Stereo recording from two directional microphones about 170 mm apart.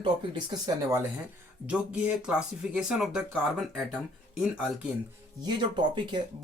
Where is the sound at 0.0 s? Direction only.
25° right (ahead or behind).